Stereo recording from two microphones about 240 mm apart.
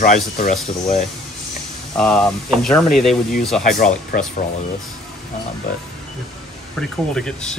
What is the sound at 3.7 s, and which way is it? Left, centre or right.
Speech, left.